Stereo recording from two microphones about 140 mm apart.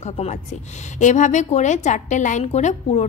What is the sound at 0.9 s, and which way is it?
A woman's voice, 60° left (ahead or behind).